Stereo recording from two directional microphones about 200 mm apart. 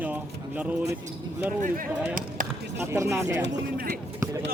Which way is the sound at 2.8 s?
15° right (ahead or behind).